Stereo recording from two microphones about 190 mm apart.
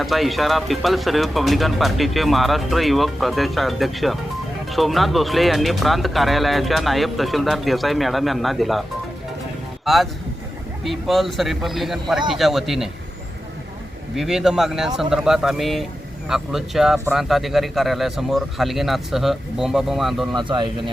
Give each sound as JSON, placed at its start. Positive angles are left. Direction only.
{"t": 0.0, "sound": "speech", "side_deg": 0}
{"t": 9.8, "sound": "speech", "side_deg": 0}
{"t": 14.2, "sound": "speech", "side_deg": 0}
{"t": 20.3, "sound": "speech", "side_deg": -25}